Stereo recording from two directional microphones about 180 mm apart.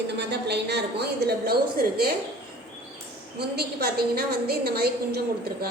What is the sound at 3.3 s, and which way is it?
A woman's voice, 60° right (ahead or behind).